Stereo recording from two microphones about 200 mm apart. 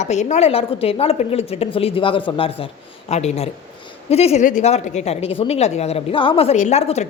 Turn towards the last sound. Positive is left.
turn(degrees=35)  # may be behind; listen again after turning